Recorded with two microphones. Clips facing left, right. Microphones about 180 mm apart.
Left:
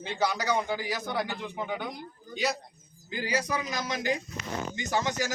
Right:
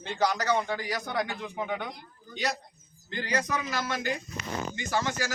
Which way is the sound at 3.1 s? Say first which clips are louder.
Even; 10° left (ahead or behind).